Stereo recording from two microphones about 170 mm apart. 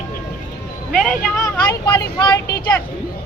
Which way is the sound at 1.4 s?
20° left (ahead or behind).